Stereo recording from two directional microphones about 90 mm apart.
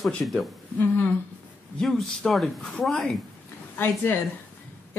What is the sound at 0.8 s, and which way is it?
Speech, 20° left (ahead or behind).